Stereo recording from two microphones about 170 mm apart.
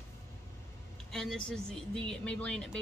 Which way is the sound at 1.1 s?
5° left (ahead or behind).